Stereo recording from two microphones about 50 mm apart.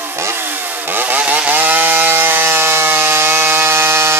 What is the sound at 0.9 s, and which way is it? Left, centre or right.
Chainsaw, right.